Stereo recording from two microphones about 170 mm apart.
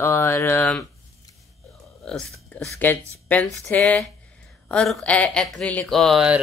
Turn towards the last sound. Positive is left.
turn(degrees=0)  # may be behind; listen again after turning